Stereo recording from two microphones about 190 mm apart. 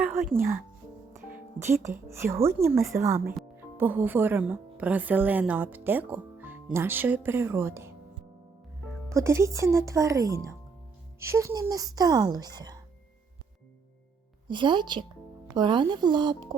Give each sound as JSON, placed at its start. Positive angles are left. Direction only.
{"t": 0.0, "sound": "music", "side_deg": -10}
{"t": 0.3, "sound": "a woman's voice", "side_deg": -10}
{"t": 9.0, "sound": "a woman's voice", "side_deg": -15}
{"t": 14.4, "sound": "a woman's voice", "side_deg": -25}